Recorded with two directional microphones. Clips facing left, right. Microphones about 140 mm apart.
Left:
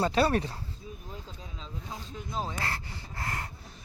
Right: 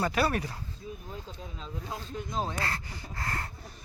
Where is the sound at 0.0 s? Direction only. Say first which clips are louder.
Left 3 dB; 30° left (ahead or behind).